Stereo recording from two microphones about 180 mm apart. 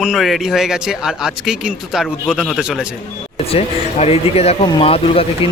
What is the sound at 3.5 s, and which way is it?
Speech, 35° left (ahead or behind).